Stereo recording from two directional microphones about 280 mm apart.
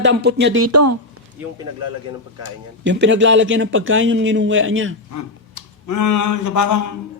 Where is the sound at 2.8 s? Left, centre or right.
Right.